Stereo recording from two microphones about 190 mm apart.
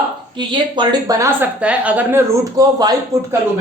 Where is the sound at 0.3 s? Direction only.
25° right (ahead or behind).